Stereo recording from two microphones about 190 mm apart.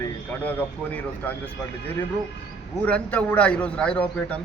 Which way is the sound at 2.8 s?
5° left (ahead or behind).